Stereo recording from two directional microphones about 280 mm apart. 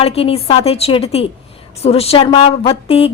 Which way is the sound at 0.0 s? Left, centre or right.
Left.